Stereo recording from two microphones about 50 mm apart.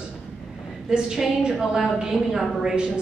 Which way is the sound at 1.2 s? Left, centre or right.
Centre.